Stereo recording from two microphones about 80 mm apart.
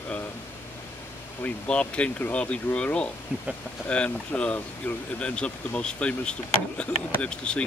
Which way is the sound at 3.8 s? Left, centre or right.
Centre.